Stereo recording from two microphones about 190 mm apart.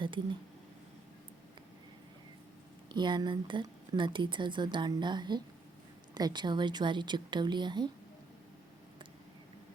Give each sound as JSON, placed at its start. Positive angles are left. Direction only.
{"t": 0.0, "sound": "speech", "side_deg": -25}
{"t": 2.9, "sound": "speech", "side_deg": -25}